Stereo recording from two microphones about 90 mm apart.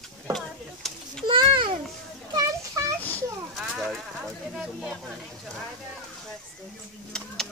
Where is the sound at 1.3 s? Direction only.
65° right (ahead or behind).